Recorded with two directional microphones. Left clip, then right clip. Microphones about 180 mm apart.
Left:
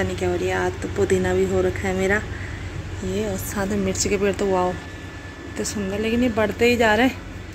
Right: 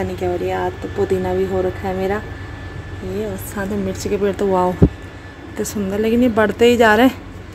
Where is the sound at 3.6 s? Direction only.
5° right (ahead or behind).